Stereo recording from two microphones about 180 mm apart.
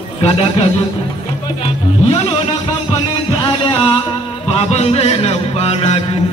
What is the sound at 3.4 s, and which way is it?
Music, 25° left (ahead or behind).